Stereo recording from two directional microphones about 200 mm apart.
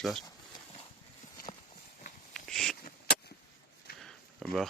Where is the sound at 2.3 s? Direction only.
Centre (ahead or behind).